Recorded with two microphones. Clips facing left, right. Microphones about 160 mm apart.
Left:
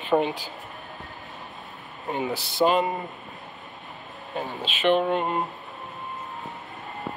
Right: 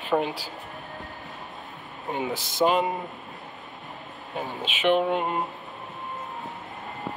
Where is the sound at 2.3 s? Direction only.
15° right (ahead or behind).